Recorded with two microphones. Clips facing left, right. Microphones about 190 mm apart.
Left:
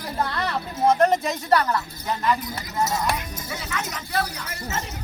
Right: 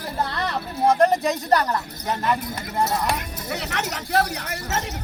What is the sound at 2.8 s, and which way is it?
Speech, 60° right (ahead or behind).